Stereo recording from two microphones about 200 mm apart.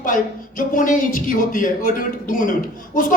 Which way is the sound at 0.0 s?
40° left (ahead or behind).